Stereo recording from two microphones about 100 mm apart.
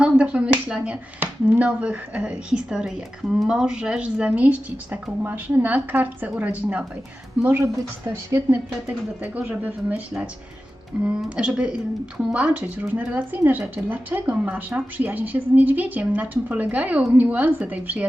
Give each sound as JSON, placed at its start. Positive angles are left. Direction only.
{"t": 0.0, "sound": "a woman's voice", "side_deg": -10}
{"t": 8.9, "sound": "a woman's voice", "side_deg": -15}